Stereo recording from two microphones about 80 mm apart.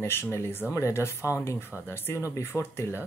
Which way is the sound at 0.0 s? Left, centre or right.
Left.